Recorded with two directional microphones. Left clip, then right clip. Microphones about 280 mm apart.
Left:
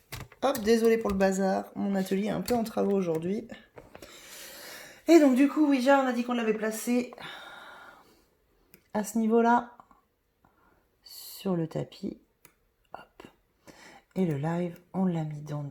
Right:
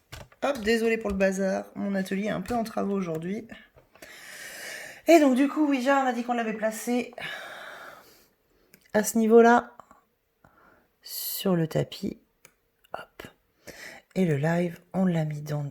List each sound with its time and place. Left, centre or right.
0.6 s speech: centre
6.9 s a sound: right
8.9 s speech: right
11.0 s speech: right
12.9 s a sound: right
14.9 s speech: right